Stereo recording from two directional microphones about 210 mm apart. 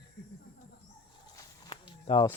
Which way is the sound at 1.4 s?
20° left (ahead or behind).